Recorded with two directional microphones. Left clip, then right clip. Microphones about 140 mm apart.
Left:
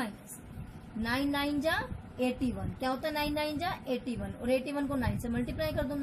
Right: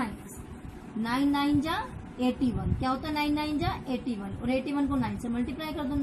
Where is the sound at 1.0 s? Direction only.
50° left (ahead or behind).